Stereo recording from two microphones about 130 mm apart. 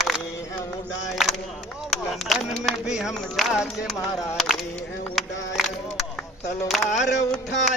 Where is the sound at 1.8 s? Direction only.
Centre (ahead or behind).